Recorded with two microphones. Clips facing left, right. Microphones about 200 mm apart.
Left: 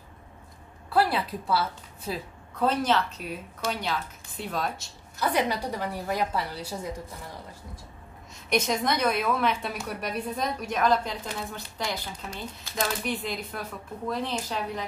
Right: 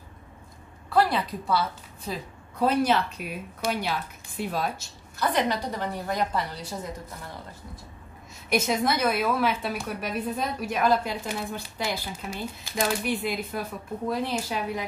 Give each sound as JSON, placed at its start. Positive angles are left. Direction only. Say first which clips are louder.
{"t": 0.9, "sound": "a woman's voice", "louder": "right 1 dB", "side_deg": 5}
{"t": 2.6, "sound": "a woman's voice", "louder": "right 2 dB", "side_deg": -10}
{"t": 5.2, "sound": "a woman's voice", "louder": "right 1 dB", "side_deg": 10}
{"t": 8.5, "sound": "a woman's voice", "louder": "right 1 dB", "side_deg": -5}